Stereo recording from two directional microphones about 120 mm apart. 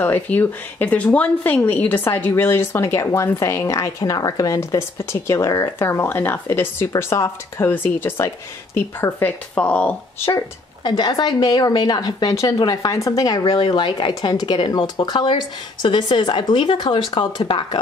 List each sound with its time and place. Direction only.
0.0 s speech: 15° left (ahead or behind)
10.8 s speech: 35° left (ahead or behind)